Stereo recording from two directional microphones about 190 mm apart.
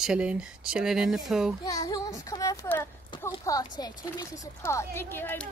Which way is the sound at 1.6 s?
20° left (ahead or behind).